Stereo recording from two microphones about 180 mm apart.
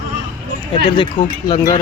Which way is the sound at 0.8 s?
25° left (ahead or behind).